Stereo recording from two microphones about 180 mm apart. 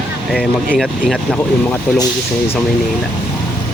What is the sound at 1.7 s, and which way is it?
Speech, 20° left (ahead or behind).